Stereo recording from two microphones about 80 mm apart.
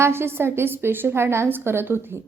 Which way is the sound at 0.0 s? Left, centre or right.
Right.